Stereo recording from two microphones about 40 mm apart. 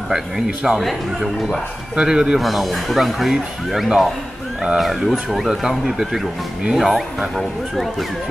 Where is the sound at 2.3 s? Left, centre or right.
Centre.